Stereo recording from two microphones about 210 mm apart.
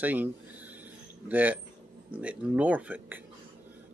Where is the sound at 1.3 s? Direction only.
10° right (ahead or behind).